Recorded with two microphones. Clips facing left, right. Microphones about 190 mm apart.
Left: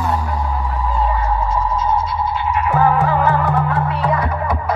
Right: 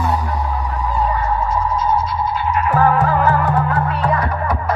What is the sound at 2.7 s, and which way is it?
Music, 10° left (ahead or behind).